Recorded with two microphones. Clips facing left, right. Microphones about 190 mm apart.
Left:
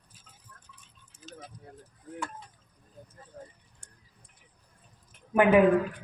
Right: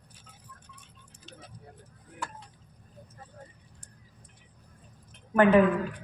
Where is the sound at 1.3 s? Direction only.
45° left (ahead or behind).